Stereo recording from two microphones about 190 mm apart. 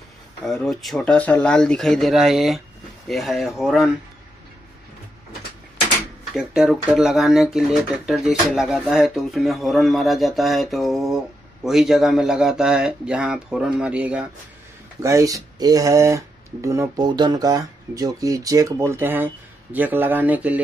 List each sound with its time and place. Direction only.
0.5 s speech: centre (ahead or behind)
6.3 s speech: centre (ahead or behind)